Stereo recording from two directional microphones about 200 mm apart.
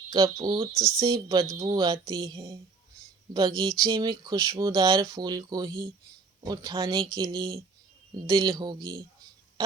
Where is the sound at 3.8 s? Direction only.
20° right (ahead or behind).